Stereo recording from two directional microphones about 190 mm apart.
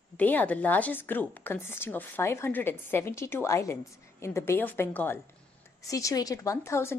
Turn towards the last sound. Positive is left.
turn(degrees=15)  # may be behind; listen again after turning